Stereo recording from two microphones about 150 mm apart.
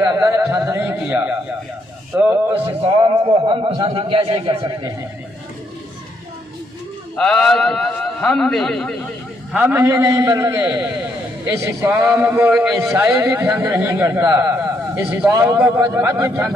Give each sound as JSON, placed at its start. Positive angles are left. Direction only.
{"t": 0.0, "sound": "a man's voice", "side_deg": -20}
{"t": 3.0, "sound": "a man's voice", "side_deg": -35}
{"t": 7.2, "sound": "a man's voice", "side_deg": 5}
{"t": 9.5, "sound": "a man's voice", "side_deg": -10}